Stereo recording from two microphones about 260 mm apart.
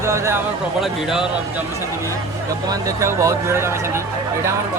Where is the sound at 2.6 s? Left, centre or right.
Centre.